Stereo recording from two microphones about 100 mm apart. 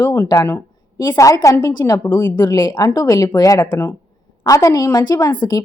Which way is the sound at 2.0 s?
20° left (ahead or behind).